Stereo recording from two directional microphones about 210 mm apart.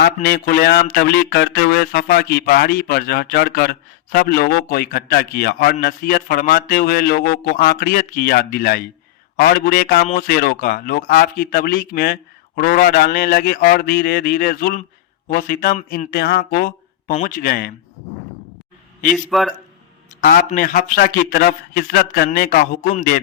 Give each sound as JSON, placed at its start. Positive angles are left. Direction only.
{"t": 0.0, "sound": "a man's voice", "side_deg": 45}
{"t": 19.1, "sound": "a man's voice", "side_deg": 0}
{"t": 20.2, "sound": "a man's voice", "side_deg": 40}